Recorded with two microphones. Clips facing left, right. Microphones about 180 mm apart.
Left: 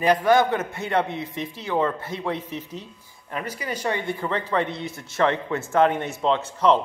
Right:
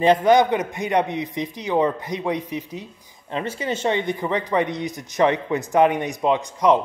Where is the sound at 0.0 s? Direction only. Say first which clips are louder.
Right 3 dB; 25° right (ahead or behind).